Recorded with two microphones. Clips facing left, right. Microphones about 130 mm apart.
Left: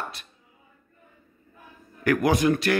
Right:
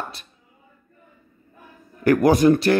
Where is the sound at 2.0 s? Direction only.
40° right (ahead or behind).